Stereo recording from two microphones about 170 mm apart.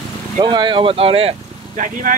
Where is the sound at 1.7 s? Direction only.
50° right (ahead or behind).